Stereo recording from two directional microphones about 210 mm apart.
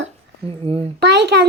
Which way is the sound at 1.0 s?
55° right (ahead or behind).